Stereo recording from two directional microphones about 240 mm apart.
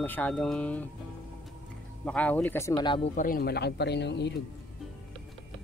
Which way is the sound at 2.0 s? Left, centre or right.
Centre.